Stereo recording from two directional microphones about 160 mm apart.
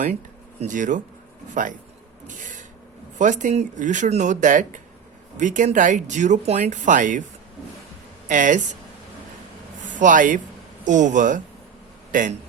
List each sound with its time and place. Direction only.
0.6 s speech: 55° right (ahead or behind)
2.2 s printer: 50° right (ahead or behind)
3.2 s speech: 50° right (ahead or behind)
8.3 s speech: 55° right (ahead or behind)
10.0 s speech: 55° right (ahead or behind)